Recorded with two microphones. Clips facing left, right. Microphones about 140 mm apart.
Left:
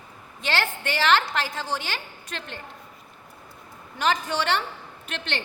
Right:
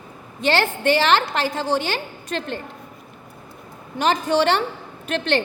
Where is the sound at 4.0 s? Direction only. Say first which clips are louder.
Right 6 dB; 30° right (ahead or behind).